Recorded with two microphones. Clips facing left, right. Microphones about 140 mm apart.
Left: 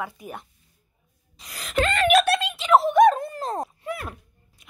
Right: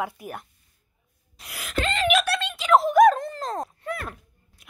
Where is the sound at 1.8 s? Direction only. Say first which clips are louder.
Left 4 dB; 55° left (ahead or behind).